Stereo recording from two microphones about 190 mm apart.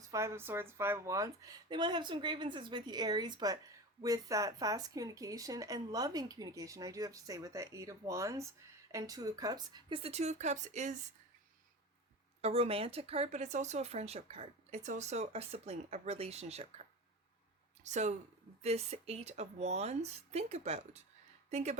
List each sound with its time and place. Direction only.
0.1 s speech: 15° right (ahead or behind); by 10.9 s 40° right (ahead or behind)
12.4 s speech: 30° right (ahead or behind)
17.8 s speech: 40° right (ahead or behind)